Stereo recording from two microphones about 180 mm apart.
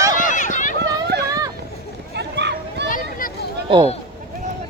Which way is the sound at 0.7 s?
65° right (ahead or behind).